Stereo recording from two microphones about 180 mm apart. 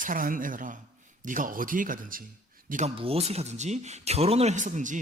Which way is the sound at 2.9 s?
30° right (ahead or behind).